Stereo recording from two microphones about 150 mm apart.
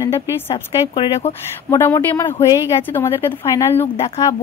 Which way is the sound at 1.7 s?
15° left (ahead or behind).